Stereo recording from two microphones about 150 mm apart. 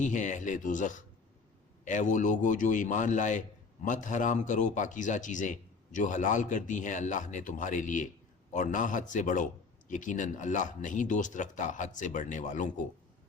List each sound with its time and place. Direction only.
0.0 s a man's voice: 55° left (ahead or behind)